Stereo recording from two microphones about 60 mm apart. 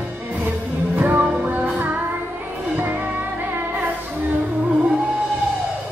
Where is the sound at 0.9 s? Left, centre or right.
Right.